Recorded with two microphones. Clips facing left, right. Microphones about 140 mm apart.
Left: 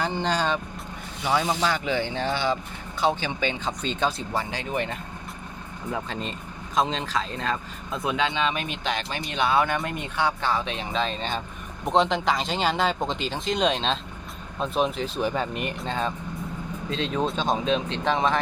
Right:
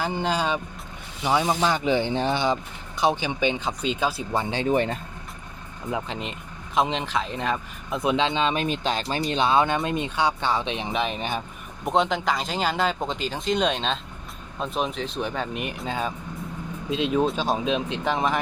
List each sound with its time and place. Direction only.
0.0 s speech: 5° right (ahead or behind)
4.7 s speech: 35° right (ahead or behind)
5.9 s speech: 15° right (ahead or behind)
11.9 s speech: centre (ahead or behind)